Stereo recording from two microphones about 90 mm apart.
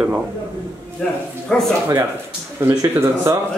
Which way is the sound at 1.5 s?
10° left (ahead or behind).